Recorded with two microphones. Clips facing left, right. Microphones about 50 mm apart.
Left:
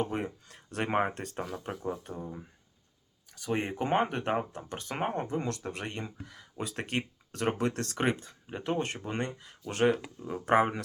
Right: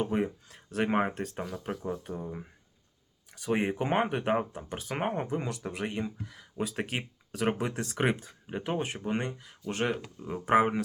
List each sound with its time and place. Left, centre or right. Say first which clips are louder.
0.0 s speech: right 3 dB; centre
2.1 s speech: right 2 dB; centre